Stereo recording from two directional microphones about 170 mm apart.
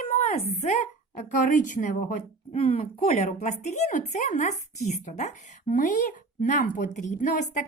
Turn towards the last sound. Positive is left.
turn(degrees=50)  # may be behind; listen again after turning